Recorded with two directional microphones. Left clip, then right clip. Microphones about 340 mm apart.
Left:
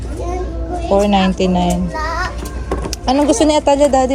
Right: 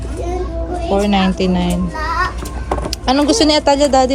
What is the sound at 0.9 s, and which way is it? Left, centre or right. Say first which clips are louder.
Speech: left 3 dB; centre.